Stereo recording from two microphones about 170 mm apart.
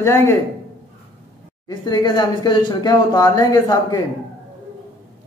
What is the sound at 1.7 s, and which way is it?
Speech, 25° left (ahead or behind).